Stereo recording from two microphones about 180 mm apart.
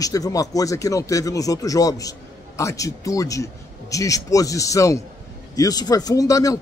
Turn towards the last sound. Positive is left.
turn(degrees=20)  # may be behind; listen again after turning